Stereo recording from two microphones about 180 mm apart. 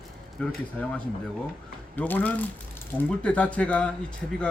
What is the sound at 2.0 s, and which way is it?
Speech, 10° left (ahead or behind).